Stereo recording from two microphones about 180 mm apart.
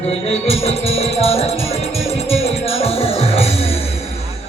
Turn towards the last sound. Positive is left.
turn(degrees=35)  # may be behind; listen again after turning